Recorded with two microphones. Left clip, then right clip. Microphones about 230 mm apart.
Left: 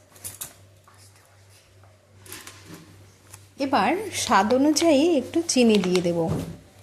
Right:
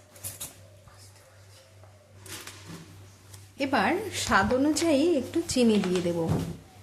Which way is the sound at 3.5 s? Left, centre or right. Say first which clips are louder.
Left 4 dB; centre.